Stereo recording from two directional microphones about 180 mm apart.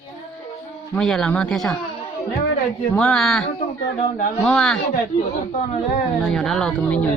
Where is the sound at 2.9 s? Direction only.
5° left (ahead or behind).